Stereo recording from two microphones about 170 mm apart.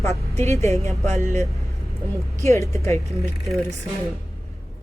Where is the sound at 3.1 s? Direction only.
Centre (ahead or behind).